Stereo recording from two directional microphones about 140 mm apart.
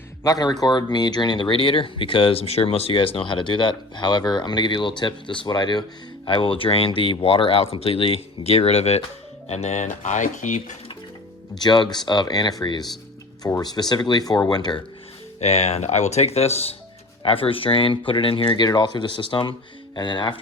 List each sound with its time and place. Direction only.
0.2 s speech: 25° left (ahead or behind); by 9.8 s 50° left (ahead or behind)
9.8 s speech: 60° left (ahead or behind)
11.6 s speech: 30° left (ahead or behind)
15.4 s speech: 50° left (ahead or behind); by 20.4 s 35° left (ahead or behind)